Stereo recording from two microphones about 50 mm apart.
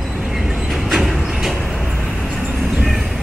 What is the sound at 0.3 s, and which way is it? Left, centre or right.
Vehicle, centre.